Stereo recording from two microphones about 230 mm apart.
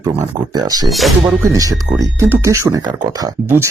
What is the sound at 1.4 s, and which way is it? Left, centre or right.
Speech, centre.